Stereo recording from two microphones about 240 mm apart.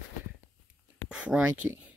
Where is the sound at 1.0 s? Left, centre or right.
Centre.